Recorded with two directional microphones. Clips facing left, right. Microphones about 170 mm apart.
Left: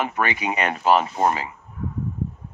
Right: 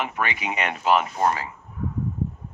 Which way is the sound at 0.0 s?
40° left (ahead or behind).